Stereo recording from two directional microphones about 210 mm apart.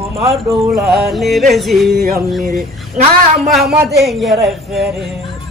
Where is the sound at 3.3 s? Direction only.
Centre (ahead or behind).